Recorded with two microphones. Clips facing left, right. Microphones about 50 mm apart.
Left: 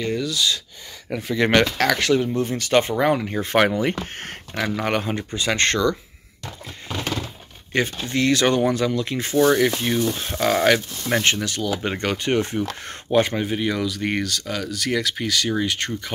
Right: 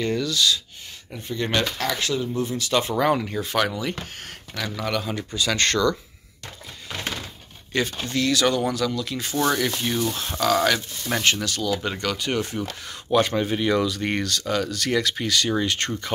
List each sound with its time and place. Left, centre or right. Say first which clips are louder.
0.0 s speech: even; centre
1.1 s speech: left 7 dB; left
1.6 s speech: left 6 dB; left
2.2 s speech: left 3 dB; left
3.0 s speech: left 1 dB; centre
3.4 s speech: left 8 dB; left
7.7 s speech: left 2 dB; left
10.1 s speech: left 1 dB; centre
10.4 s speech: left 3 dB; left
11.1 s speech: left 2 dB; centre; by 12.9 s left
13.1 s speech: left 1 dB; centre
13.5 s speech: right 2 dB; centre